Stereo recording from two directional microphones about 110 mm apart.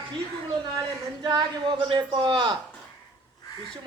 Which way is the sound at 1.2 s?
40° right (ahead or behind).